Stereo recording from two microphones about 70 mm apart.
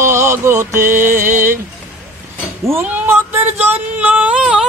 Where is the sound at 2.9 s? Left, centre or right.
Right.